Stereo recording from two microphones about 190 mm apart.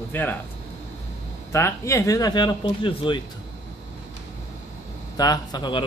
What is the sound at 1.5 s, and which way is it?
A man's voice, 15° left (ahead or behind).